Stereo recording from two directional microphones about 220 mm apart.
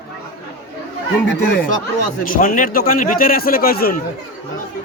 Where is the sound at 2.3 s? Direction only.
40° left (ahead or behind).